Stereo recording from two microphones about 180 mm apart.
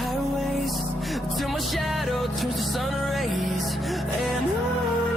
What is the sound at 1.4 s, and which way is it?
Music, centre (ahead or behind).